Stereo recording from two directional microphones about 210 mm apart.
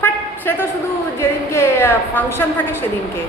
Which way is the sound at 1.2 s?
10° left (ahead or behind).